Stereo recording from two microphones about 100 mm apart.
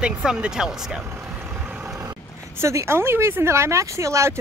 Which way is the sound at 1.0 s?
20° right (ahead or behind).